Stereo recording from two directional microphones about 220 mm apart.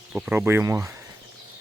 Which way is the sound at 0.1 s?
5° right (ahead or behind).